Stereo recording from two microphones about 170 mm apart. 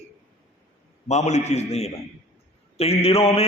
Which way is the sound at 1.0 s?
40° left (ahead or behind).